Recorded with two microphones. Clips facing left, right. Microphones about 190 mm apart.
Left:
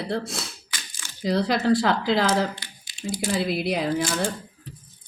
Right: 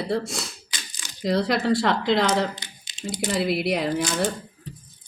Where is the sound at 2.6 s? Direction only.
20° right (ahead or behind).